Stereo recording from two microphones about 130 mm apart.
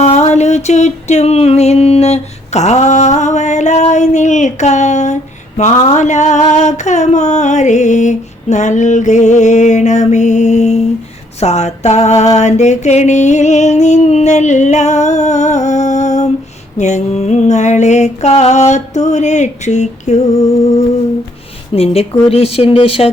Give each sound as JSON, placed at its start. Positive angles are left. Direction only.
{"t": 0.0, "sound": "music", "side_deg": 60}
{"t": 5.5, "sound": "a sound", "side_deg": 65}
{"t": 21.7, "sound": "speech", "side_deg": 45}